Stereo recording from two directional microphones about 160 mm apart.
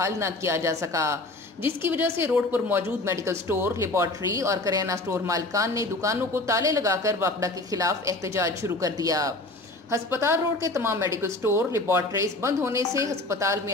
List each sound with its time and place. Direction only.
0.0 s a woman's voice: 20° right (ahead or behind)